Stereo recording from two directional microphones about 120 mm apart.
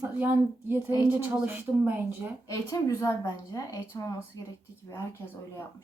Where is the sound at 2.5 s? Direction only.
25° left (ahead or behind).